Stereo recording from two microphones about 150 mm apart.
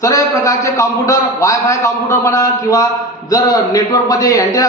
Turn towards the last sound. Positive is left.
turn(degrees=25)  # may be behind; listen again after turning